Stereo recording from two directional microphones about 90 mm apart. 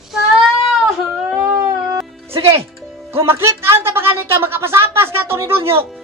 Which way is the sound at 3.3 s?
30° right (ahead or behind).